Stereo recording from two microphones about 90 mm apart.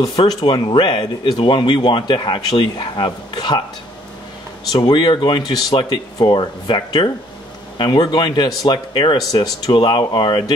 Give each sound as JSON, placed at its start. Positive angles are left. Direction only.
{"t": 0.3, "sound": "speech", "side_deg": 50}
{"t": 4.8, "sound": "speech", "side_deg": 60}